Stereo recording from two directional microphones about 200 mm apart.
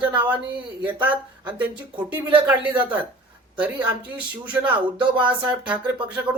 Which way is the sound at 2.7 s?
25° right (ahead or behind).